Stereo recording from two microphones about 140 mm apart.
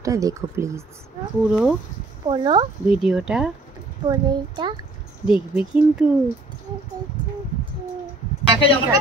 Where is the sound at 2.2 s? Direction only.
35° right (ahead or behind).